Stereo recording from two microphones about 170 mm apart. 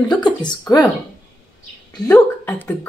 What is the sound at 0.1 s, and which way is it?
Speech, 25° left (ahead or behind).